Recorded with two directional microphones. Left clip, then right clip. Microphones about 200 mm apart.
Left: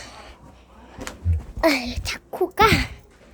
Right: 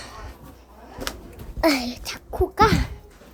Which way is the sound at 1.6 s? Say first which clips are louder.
Left 1 dB; 10° left (ahead or behind).